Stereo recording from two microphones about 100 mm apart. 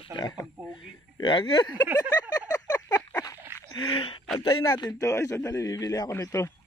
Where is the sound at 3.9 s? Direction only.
65° left (ahead or behind).